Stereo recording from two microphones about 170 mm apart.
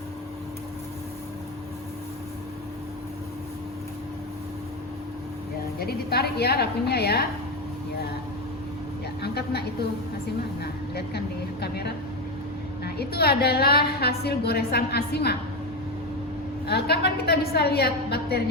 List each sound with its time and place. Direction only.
5.8 s a woman's voice: 65° left (ahead or behind)
9.2 s a woman's voice: 70° left (ahead or behind)
16.6 s a woman's voice: 70° left (ahead or behind)